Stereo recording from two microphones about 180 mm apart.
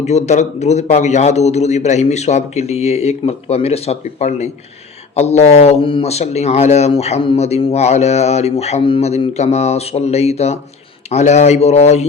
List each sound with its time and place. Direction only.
0.0 s speech: 40° left (ahead or behind)